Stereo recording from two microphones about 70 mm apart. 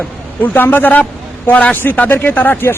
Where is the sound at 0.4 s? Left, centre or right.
Left.